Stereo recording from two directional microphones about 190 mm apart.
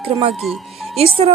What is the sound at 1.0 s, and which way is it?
Speech, 30° right (ahead or behind).